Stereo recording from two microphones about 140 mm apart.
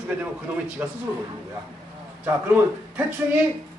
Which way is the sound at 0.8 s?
15° right (ahead or behind).